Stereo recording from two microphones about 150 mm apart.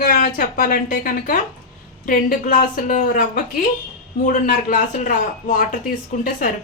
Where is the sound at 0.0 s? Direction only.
75° left (ahead or behind).